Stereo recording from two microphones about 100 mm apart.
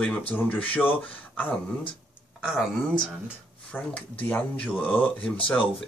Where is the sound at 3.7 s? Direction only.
15° left (ahead or behind).